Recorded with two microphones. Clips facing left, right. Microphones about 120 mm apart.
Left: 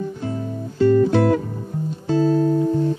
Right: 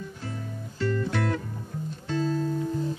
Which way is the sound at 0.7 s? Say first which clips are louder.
Left 13 dB; 25° left (ahead or behind).